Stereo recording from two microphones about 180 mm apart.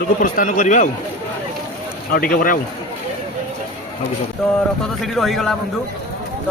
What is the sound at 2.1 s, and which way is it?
Speech, 55° left (ahead or behind).